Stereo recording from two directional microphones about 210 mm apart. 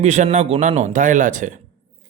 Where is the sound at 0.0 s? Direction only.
35° right (ahead or behind).